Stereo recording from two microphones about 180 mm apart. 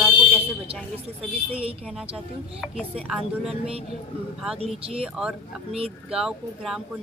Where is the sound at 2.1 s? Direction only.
5° right (ahead or behind).